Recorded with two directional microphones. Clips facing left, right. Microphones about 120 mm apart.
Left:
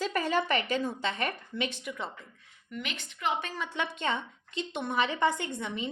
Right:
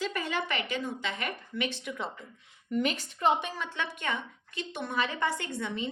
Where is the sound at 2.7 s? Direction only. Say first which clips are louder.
Right 9 dB; 40° right (ahead or behind).